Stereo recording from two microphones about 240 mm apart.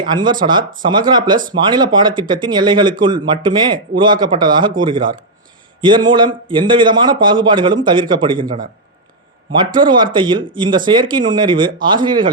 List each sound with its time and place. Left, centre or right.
0.1 s speech: centre
9.5 s speech: centre